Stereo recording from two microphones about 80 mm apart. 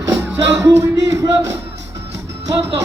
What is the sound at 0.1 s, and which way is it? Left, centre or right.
Music, centre.